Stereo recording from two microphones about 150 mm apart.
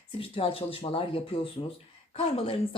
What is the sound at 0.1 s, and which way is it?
A woman's voice, 40° left (ahead or behind).